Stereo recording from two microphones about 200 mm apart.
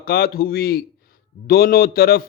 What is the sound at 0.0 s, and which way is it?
A man's voice, 50° left (ahead or behind).